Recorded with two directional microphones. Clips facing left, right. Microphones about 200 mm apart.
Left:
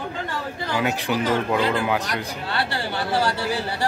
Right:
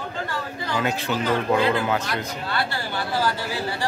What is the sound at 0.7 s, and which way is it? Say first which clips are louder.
Speech: left 1 dB; 10° left (ahead or behind).